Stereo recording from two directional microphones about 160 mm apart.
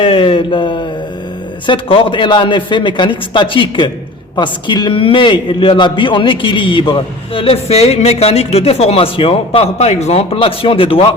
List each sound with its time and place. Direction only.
0.0 s a man's voice: 35° left (ahead or behind)